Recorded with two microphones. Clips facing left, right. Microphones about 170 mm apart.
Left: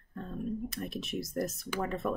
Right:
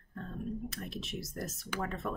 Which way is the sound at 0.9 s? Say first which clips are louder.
Left 3 dB; 55° left (ahead or behind).